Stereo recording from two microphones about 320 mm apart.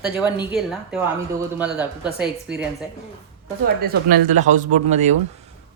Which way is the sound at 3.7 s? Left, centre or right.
Right.